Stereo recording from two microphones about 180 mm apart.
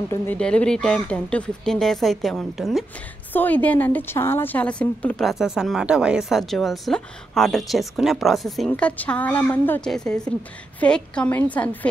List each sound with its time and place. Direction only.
0.1 s a woman's voice: 5° left (ahead or behind)